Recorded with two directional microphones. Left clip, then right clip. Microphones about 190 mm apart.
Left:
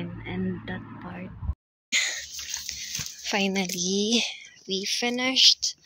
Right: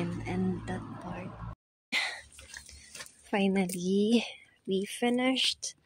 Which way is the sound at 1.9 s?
25° right (ahead or behind).